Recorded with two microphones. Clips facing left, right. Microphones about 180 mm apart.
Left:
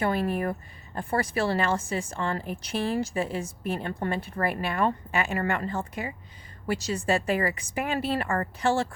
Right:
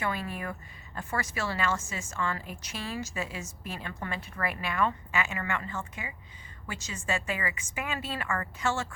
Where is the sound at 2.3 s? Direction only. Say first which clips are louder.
Left 9 dB; 55° left (ahead or behind).